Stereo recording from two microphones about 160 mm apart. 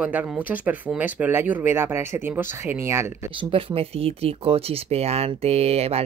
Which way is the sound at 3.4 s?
35° right (ahead or behind).